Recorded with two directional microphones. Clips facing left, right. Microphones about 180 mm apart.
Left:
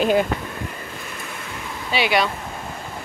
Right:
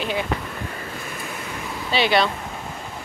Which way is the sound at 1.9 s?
10° left (ahead or behind).